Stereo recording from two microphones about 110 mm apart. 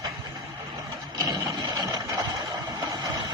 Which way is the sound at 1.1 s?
35° right (ahead or behind).